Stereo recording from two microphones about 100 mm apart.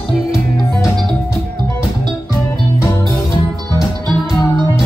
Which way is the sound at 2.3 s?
30° left (ahead or behind).